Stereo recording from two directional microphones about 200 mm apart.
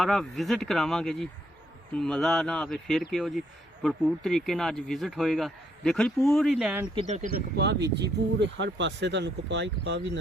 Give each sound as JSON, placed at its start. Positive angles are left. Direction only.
{"t": 0.0, "sound": "speech", "side_deg": 0}
{"t": 7.3, "sound": "speech", "side_deg": -55}